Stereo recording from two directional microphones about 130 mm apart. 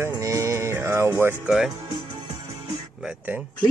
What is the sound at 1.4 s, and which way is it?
Speech, 5° right (ahead or behind).